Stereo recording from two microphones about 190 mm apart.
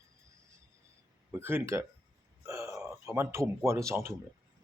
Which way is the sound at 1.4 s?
10° right (ahead or behind).